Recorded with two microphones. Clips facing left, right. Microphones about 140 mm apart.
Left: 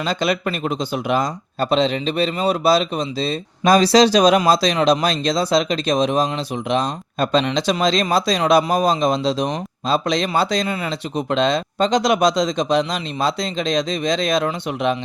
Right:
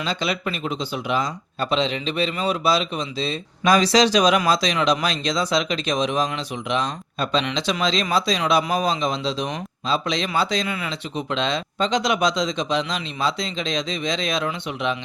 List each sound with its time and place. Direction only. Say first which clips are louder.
0.0 s speech: left 5 dB; 45° left (ahead or behind)